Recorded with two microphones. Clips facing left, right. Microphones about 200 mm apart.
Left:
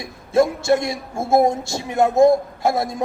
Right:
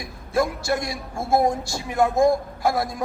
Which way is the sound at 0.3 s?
25° left (ahead or behind).